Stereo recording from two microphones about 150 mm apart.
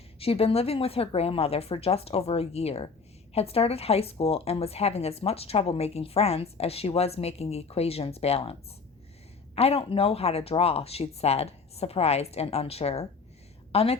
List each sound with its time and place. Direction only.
0.2 s a woman's voice: 40° left (ahead or behind)
9.6 s speech: 40° left (ahead or behind)